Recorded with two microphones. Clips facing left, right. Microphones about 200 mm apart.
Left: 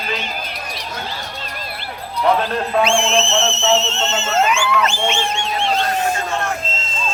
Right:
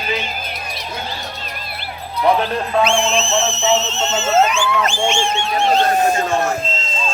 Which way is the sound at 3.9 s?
5° right (ahead or behind).